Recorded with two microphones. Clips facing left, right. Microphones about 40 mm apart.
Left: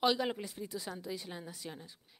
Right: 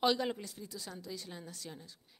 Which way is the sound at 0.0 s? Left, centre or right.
Centre.